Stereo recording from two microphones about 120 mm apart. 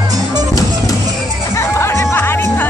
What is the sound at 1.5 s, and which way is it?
Music, 25° left (ahead or behind).